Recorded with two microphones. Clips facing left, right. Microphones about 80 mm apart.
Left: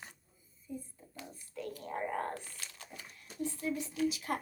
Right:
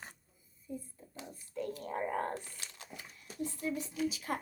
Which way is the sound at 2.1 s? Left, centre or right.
Right.